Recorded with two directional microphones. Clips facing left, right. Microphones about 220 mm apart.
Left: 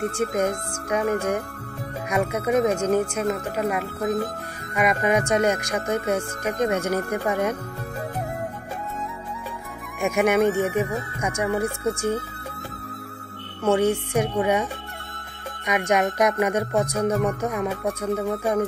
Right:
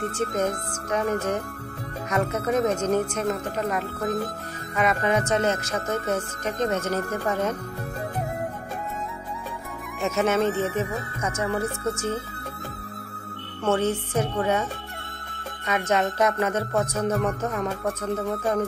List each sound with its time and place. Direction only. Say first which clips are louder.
0.1 s speech: left 2 dB; 10° left (ahead or behind)
10.0 s speech: left 3 dB; 15° left (ahead or behind)
13.7 s speech: left 3 dB; 15° left (ahead or behind)